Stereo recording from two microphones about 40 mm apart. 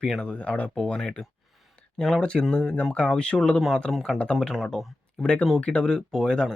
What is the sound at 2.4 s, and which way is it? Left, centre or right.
Speech, centre.